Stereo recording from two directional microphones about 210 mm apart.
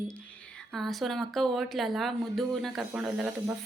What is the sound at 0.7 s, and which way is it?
A woman's voice, centre (ahead or behind).